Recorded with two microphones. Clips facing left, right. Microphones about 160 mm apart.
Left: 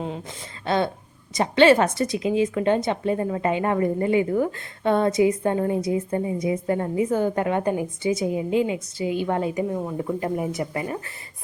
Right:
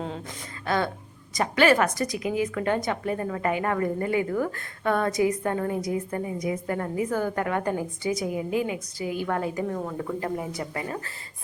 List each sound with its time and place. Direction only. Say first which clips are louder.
0.6 s a woman's voice: left 3 dB; 25° left (ahead or behind)